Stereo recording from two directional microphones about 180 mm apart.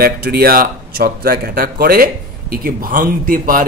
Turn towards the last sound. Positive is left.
turn(degrees=-50)  # may be behind; listen again after turning